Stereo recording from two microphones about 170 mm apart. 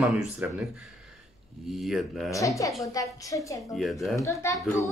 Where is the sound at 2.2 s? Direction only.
20° left (ahead or behind).